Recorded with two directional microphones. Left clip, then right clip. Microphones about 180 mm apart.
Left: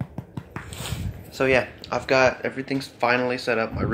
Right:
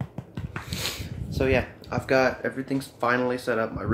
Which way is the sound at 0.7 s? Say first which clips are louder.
Right 6 dB; 45° right (ahead or behind).